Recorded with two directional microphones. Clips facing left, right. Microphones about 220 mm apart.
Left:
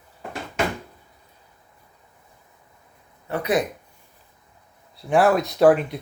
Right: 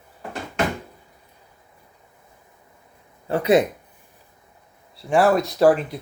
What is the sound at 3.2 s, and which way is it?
Speech, 30° right (ahead or behind).